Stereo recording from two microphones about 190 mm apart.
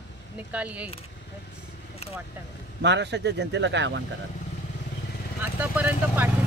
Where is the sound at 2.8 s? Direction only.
65° right (ahead or behind).